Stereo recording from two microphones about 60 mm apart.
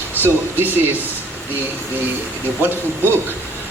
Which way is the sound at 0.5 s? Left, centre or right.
Right.